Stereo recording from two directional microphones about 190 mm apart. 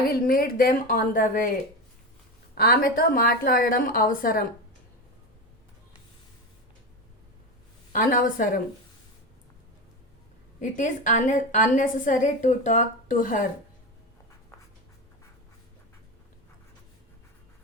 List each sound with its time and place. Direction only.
0.1 s a woman's voice: 50° left (ahead or behind)
2.6 s a woman's voice: 50° left (ahead or behind)
7.9 s a woman's voice: 45° left (ahead or behind)
10.6 s a woman's voice: 40° left (ahead or behind)